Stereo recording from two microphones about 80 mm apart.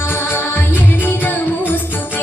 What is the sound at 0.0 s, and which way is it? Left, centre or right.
Music, left.